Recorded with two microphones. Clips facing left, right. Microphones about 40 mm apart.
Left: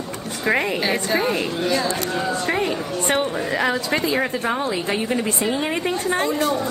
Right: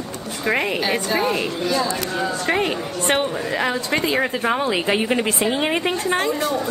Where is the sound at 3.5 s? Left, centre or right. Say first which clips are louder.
Left 1 dB; centre.